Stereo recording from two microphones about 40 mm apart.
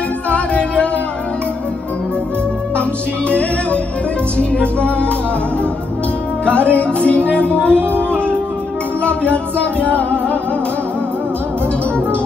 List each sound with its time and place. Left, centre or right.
0.3 s music: left
3.3 s music: left
6.4 s music: left